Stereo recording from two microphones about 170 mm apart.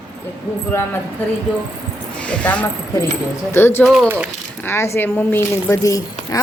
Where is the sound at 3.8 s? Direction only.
Centre (ahead or behind).